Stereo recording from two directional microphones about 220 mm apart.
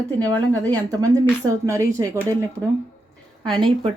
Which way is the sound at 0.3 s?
15° right (ahead or behind).